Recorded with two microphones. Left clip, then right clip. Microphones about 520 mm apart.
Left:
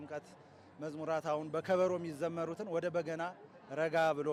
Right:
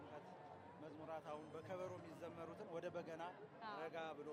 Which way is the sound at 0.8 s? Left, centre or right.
Left.